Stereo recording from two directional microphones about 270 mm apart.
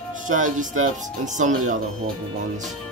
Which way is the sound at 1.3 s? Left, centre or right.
Right.